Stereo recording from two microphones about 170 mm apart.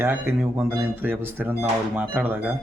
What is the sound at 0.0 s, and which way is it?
Speech, 10° right (ahead or behind).